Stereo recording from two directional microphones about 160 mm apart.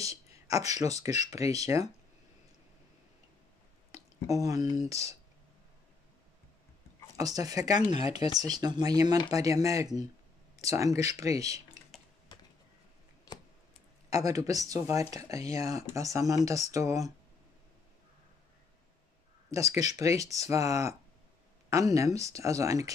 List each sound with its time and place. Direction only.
0.5 s speech: 20° right (ahead or behind)
3.9 s speech: 20° right (ahead or behind)
7.2 s speech: 20° right (ahead or behind)
12.3 s a sound: 30° left (ahead or behind)
14.1 s speech: 20° right (ahead or behind)
19.5 s speech: 20° right (ahead or behind)